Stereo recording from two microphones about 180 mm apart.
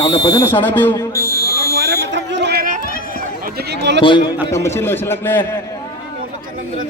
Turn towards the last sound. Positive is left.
turn(degrees=10)  # may be behind; listen again after turning